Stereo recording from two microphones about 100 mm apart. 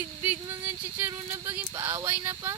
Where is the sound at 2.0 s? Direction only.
20° right (ahead or behind).